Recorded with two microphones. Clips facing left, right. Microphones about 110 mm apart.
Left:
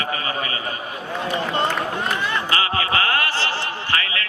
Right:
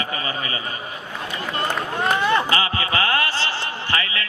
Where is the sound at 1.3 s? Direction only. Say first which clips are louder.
Left 4 dB; 30° left (ahead or behind).